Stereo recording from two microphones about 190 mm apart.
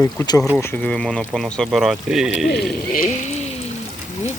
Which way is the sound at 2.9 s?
45° left (ahead or behind).